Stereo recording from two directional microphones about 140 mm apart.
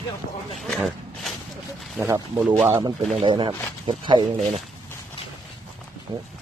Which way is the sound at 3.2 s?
35° right (ahead or behind).